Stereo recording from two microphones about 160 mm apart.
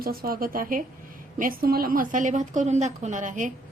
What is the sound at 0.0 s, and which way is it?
A woman's voice, 65° right (ahead or behind).